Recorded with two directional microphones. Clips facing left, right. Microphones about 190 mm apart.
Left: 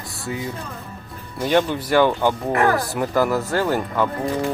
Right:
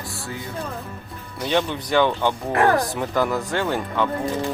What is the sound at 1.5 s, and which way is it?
Speech, 10° left (ahead or behind).